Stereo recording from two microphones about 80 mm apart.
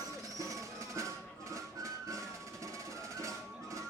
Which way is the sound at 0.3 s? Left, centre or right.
Right.